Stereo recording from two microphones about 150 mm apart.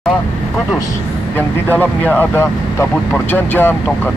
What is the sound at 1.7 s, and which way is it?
Speech, 10° left (ahead or behind).